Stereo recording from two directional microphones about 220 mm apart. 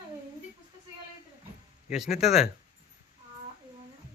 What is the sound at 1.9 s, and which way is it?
Speech, centre (ahead or behind).